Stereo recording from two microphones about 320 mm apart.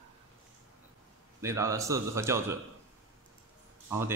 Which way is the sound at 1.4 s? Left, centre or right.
Centre.